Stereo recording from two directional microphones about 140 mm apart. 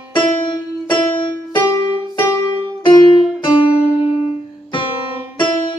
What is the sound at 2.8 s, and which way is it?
Music, 35° left (ahead or behind).